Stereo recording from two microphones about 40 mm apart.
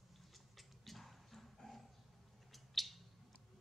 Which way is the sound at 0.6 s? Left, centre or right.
Centre.